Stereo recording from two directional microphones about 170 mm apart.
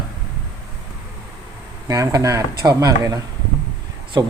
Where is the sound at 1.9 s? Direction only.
20° right (ahead or behind).